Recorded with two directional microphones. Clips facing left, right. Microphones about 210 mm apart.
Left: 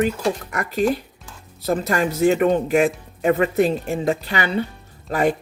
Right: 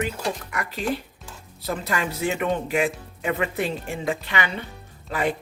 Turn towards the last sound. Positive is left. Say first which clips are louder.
# left 6 dB
turn(degrees=45)  # may be behind; listen again after turning